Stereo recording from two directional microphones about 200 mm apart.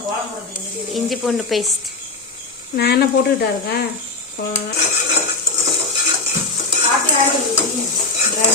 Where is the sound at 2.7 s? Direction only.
55° left (ahead or behind).